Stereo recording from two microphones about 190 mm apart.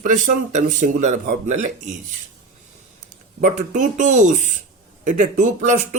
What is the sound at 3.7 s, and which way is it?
Speech, 40° right (ahead or behind).